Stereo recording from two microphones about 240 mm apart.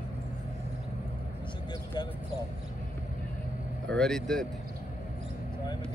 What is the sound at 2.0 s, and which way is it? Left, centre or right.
Speech, centre.